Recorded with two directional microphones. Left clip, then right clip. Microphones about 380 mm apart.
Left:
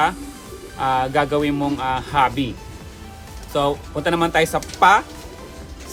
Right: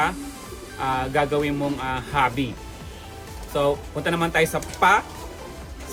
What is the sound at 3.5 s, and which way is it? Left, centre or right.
Speech, centre.